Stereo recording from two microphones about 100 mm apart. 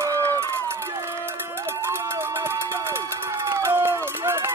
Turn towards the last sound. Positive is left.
turn(degrees=-25)  # may be behind; listen again after turning